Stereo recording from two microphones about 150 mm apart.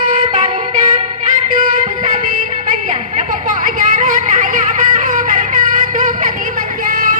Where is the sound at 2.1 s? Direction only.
55° right (ahead or behind).